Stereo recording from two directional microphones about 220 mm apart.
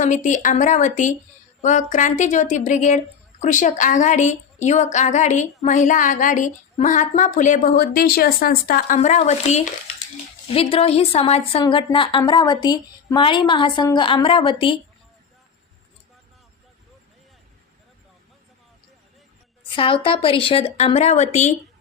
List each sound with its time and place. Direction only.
0.0 s a woman's voice: 35° left (ahead or behind)
19.7 s a woman's voice: 25° left (ahead or behind)